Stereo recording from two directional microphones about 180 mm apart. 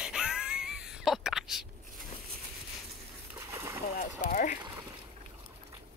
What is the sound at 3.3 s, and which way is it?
Splash, 15° right (ahead or behind).